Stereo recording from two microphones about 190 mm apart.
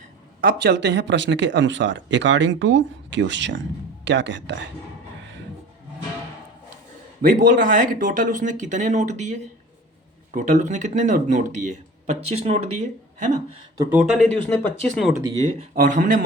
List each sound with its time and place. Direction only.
0.4 s speech: 60° right (ahead or behind)
7.2 s speech: 45° right (ahead or behind)
10.3 s speech: 40° right (ahead or behind)
14.0 s speech: centre (ahead or behind)
15.7 s speech: 45° right (ahead or behind)